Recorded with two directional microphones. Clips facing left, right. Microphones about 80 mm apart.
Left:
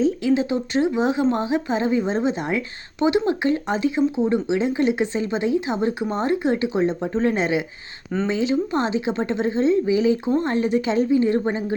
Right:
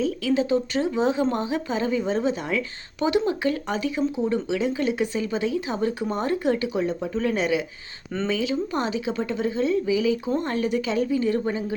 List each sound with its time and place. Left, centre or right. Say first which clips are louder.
0.0 s speech: left 4 dB; left